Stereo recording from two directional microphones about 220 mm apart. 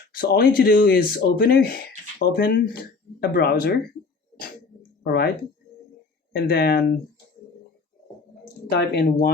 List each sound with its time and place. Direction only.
0.1 s speech: 45° left (ahead or behind)
5.0 s speech: 45° left (ahead or behind)
6.3 s speech: 45° left (ahead or behind)
8.7 s speech: 50° left (ahead or behind)